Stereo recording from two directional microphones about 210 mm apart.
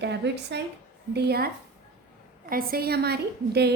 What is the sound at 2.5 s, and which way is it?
A woman's voice, 45° right (ahead or behind).